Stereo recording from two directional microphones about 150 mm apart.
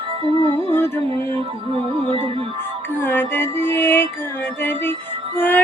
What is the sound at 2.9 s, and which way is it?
Music, 15° left (ahead or behind).